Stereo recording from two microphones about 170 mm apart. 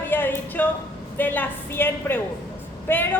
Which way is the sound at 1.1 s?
10° left (ahead or behind).